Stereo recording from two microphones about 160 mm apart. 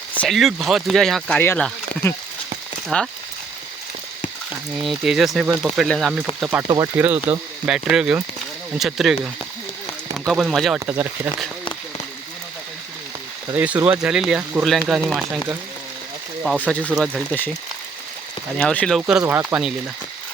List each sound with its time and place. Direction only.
0.2 s speech: centre (ahead or behind)
2.9 s speech: 5° left (ahead or behind)
4.8 s speech: centre (ahead or behind)
6.4 s speech: 10° right (ahead or behind)
6.7 s speech: 25° right (ahead or behind)
6.9 s speech: 10° right (ahead or behind)
10.8 s speech: 15° right (ahead or behind)
13.8 s speech: 5° right (ahead or behind)
16.6 s speech: 10° left (ahead or behind)
18.5 s speech: 5° left (ahead or behind)
19.2 s speech: 15° right (ahead or behind)